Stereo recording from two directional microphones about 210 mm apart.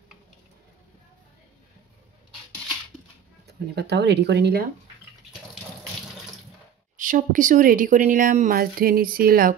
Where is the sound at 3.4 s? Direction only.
50° right (ahead or behind).